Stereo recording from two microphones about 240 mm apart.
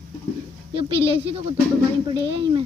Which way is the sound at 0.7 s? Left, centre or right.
Right.